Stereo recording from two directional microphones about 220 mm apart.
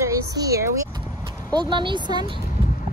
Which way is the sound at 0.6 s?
15° right (ahead or behind).